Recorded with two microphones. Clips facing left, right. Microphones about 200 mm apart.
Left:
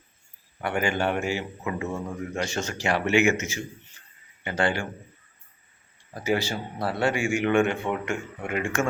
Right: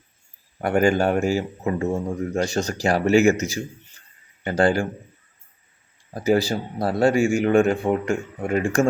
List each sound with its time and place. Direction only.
0.6 s speech: 40° right (ahead or behind)
6.1 s speech: 40° right (ahead or behind)